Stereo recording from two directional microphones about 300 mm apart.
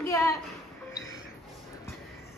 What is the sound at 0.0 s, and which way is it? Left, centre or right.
Music, centre.